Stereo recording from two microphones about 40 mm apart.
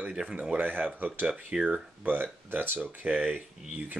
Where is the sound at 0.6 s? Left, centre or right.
Right.